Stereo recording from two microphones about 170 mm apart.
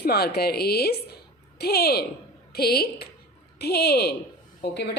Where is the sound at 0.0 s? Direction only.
65° left (ahead or behind).